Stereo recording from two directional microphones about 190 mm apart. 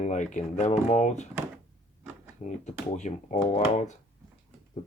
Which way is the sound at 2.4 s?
40° left (ahead or behind).